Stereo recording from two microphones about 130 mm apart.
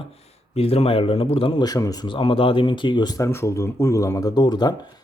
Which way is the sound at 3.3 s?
20° left (ahead or behind).